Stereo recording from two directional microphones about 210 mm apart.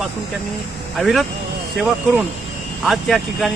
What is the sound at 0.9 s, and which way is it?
Speech, centre (ahead or behind).